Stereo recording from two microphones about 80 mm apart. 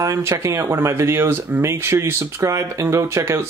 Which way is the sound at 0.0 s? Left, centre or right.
Right.